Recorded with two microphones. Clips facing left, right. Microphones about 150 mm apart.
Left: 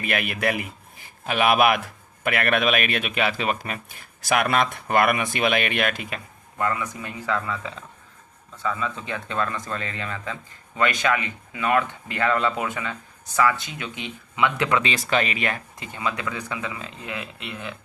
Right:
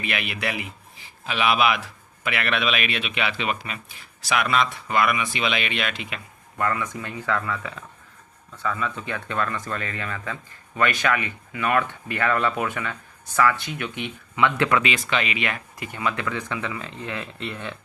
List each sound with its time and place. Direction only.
0.0 s a man's voice: 45° left (ahead or behind)
6.6 s speech: 20° left (ahead or behind)
14.8 s speech: 35° left (ahead or behind)
15.8 s speech: 20° left (ahead or behind)
17.4 s speech: 5° left (ahead or behind)